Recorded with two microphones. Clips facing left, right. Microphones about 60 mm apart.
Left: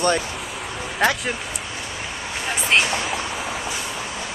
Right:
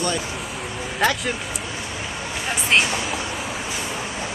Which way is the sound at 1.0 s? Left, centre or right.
Centre.